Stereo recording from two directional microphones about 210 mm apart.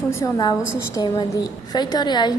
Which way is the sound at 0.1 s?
15° left (ahead or behind).